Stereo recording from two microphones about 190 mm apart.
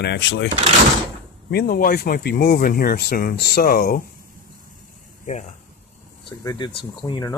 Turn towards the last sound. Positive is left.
turn(degrees=20)  # may be behind; listen again after turning